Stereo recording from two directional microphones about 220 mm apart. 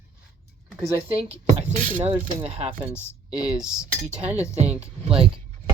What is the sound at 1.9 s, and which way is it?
Speech, 10° right (ahead or behind).